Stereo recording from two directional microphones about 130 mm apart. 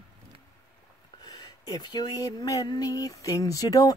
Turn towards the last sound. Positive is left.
turn(degrees=30)  # may be behind; listen again after turning